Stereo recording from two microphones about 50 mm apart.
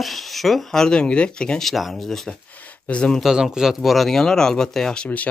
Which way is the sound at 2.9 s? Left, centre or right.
Centre.